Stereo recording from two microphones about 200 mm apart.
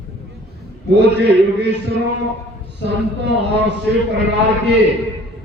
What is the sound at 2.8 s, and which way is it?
Speech, 60° right (ahead or behind).